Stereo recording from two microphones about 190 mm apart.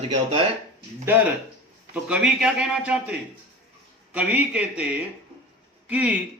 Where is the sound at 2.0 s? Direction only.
5° right (ahead or behind).